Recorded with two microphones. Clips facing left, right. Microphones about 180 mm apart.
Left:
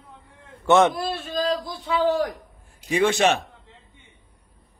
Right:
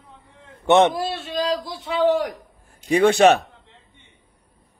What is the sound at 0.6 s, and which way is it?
Speech, 20° right (ahead or behind).